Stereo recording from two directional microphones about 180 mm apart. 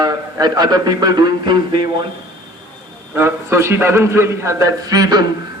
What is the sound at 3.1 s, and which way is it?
A man's voice, 15° right (ahead or behind).